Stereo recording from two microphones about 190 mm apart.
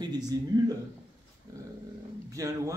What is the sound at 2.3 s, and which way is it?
Speech, 15° right (ahead or behind).